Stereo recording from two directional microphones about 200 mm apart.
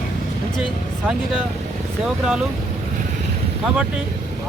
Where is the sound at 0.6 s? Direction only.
Centre (ahead or behind).